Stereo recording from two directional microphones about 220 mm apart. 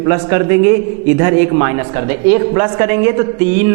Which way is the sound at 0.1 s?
15° right (ahead or behind).